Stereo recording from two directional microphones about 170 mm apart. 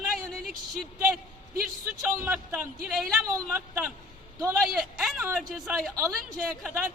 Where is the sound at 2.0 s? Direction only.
15° right (ahead or behind).